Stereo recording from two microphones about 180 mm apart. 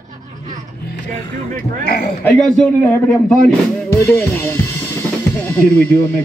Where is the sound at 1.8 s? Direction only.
60° left (ahead or behind).